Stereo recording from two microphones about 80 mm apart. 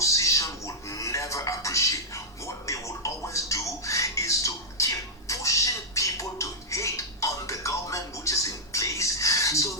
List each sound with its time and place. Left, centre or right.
0.0 s music: left